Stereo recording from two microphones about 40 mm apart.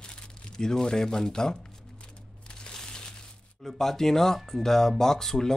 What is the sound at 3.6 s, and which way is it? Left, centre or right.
Speech, centre.